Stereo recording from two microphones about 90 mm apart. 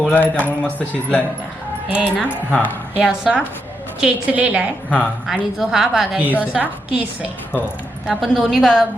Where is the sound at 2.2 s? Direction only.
20° left (ahead or behind).